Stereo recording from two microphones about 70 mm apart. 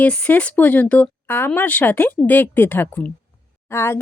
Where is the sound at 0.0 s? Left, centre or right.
Left.